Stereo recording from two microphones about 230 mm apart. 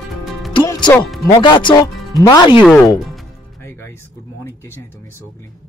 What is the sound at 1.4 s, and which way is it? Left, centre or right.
Speech, centre.